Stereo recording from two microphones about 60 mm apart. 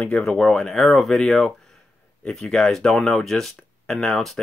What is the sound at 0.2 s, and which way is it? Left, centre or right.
Speech, centre.